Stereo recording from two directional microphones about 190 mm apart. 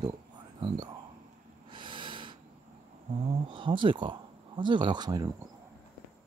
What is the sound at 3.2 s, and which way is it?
Speech, 25° right (ahead or behind).